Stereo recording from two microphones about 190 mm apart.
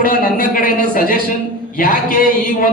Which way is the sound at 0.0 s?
45° left (ahead or behind).